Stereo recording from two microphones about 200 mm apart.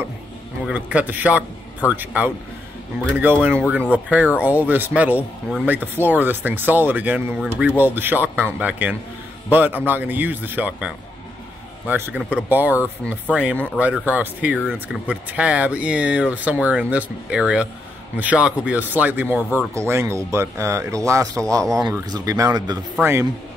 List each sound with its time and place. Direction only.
0.7 s speech: 5° right (ahead or behind)
11.9 s speech: 10° right (ahead or behind)